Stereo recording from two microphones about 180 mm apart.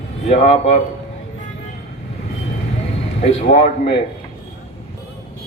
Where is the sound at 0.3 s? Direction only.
35° left (ahead or behind).